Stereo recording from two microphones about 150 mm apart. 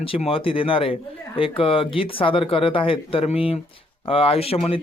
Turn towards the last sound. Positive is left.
turn(degrees=40)  # may be behind; listen again after turning